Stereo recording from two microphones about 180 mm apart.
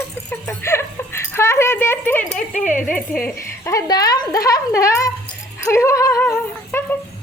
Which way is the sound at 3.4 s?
15° left (ahead or behind).